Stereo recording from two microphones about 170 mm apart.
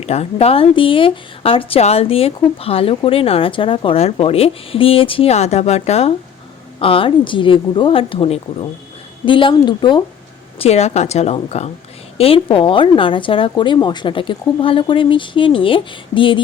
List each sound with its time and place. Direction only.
0.0 s speech: 40° left (ahead or behind)
10.6 s speech: 40° left (ahead or behind)